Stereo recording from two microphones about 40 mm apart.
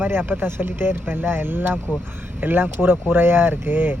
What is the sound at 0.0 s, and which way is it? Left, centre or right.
Speech, right.